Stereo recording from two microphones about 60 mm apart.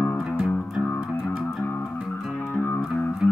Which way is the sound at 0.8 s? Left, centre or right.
Left.